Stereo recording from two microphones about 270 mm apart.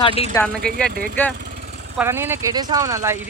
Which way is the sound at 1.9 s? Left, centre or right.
Centre.